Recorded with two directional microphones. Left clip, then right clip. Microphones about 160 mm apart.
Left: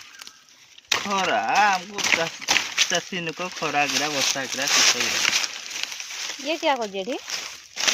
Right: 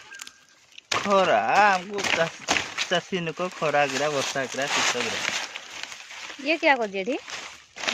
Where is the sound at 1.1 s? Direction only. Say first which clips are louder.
Right 2 dB; 50° right (ahead or behind).